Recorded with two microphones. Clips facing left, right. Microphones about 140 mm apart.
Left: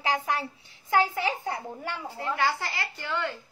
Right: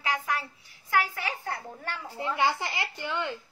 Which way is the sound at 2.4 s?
20° right (ahead or behind).